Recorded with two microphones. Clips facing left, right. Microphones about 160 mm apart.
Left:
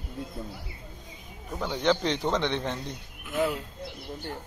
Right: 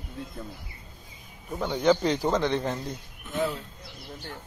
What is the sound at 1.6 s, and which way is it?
Speech, 5° right (ahead or behind).